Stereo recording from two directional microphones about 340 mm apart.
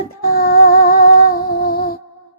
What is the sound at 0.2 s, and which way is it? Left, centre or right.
Female singing, left.